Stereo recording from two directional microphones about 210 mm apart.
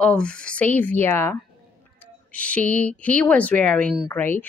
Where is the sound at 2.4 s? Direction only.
5° left (ahead or behind).